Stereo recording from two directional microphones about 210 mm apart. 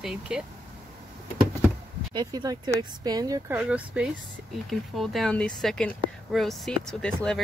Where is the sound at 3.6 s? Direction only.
5° right (ahead or behind).